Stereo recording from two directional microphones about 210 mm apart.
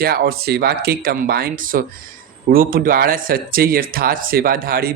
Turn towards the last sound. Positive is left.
turn(degrees=-45)  # may be behind; listen again after turning